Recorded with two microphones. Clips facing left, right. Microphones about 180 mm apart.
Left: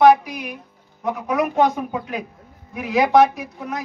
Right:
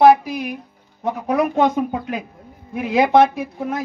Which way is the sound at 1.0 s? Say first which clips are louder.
Right 2 dB; 30° right (ahead or behind).